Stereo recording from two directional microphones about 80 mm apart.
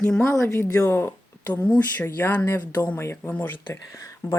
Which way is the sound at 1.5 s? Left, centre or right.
Centre.